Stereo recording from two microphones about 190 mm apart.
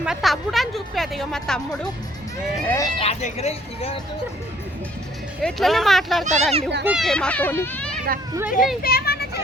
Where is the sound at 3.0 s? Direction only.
35° left (ahead or behind).